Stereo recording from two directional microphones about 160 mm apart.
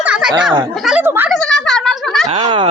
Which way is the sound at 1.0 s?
15° right (ahead or behind).